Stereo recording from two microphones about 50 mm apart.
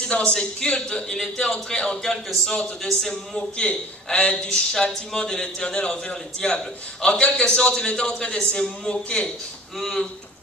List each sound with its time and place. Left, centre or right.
0.0 s a man's voice: left
3.5 s a man's voice: left
9.8 s speech: centre